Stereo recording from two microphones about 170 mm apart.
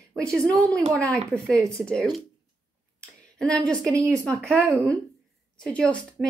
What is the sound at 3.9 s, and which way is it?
Speech, 20° right (ahead or behind).